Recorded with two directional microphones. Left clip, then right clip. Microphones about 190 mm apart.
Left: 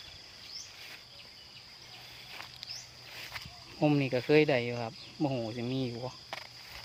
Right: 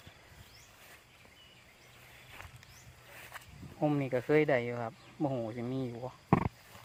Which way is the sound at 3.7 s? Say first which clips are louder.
Left 3 dB; 25° left (ahead or behind).